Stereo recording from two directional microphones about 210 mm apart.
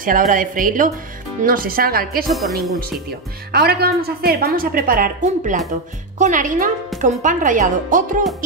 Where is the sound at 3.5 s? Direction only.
45° right (ahead or behind).